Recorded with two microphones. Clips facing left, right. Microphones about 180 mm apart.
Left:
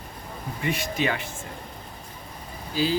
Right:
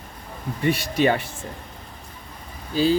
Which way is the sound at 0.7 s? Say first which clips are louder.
Right 6 dB; 40° right (ahead or behind).